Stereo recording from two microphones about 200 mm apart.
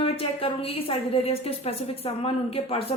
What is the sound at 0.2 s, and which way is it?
A woman's voice, 30° left (ahead or behind).